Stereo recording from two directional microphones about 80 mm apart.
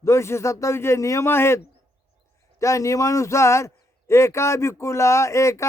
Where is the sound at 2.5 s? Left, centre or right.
Left.